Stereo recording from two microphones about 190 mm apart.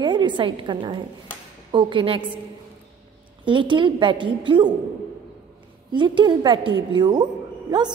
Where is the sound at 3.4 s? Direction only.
25° right (ahead or behind).